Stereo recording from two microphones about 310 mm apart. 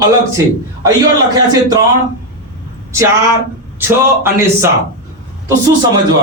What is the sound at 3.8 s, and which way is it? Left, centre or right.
Speech, centre.